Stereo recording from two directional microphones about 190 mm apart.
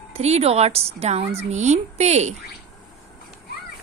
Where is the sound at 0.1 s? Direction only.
35° right (ahead or behind).